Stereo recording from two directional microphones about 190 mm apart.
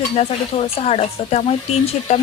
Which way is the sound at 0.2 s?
30° left (ahead or behind).